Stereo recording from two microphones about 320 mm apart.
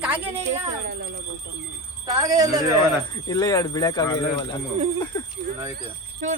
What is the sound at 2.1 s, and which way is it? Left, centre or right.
Speech, centre.